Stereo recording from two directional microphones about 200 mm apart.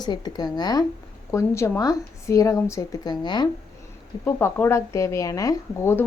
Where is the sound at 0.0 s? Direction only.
20° left (ahead or behind).